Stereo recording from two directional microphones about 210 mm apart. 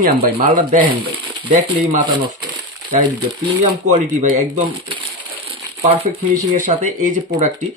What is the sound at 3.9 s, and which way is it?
Speech, 35° right (ahead or behind).